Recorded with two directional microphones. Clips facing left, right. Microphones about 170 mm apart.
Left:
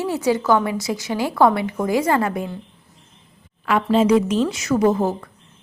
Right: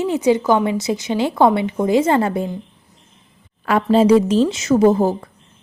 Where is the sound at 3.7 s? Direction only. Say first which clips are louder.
Right 3 dB; 35° right (ahead or behind).